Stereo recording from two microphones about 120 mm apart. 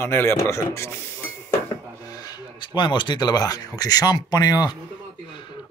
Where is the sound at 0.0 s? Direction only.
20° left (ahead or behind).